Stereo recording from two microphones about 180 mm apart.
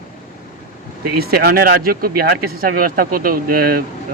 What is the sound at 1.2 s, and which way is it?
Speech, 60° right (ahead or behind).